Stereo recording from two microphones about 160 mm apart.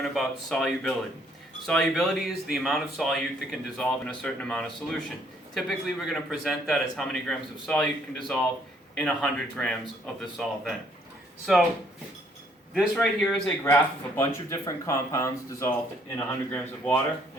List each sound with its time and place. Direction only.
0.0 s a man's voice: centre (ahead or behind)
12.7 s a man's voice: centre (ahead or behind)
14.2 s speech: 15° left (ahead or behind)